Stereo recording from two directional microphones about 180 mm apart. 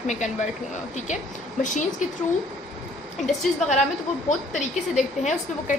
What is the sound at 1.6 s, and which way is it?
Speech, 45° left (ahead or behind).